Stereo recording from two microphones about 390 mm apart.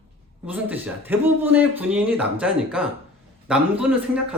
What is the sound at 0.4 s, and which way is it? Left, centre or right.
Speech, centre.